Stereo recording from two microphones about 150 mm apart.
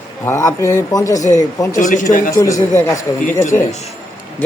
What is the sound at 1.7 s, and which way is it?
Speech, 60° left (ahead or behind).